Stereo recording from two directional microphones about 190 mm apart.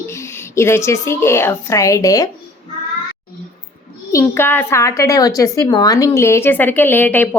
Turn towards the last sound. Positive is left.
turn(degrees=10)  # may be behind; listen again after turning